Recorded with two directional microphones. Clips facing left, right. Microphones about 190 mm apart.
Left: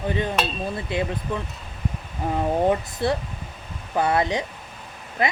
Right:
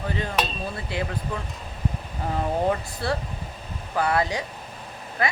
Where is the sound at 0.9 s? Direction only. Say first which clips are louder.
Left 4 dB; 20° left (ahead or behind).